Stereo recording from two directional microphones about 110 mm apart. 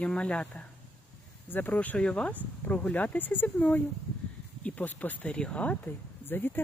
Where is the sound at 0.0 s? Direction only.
10° left (ahead or behind).